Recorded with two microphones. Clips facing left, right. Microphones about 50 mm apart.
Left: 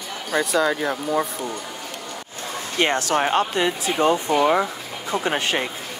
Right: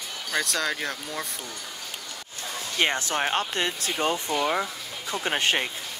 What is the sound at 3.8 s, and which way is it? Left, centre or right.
Speech, left.